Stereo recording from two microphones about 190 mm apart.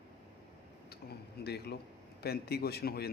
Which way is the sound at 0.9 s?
60° left (ahead or behind).